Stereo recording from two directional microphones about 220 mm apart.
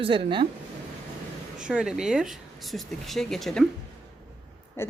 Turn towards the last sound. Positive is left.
turn(degrees=10)  # may be behind; listen again after turning